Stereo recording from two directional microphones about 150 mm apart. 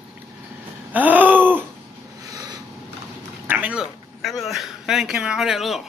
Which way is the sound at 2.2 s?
25° right (ahead or behind).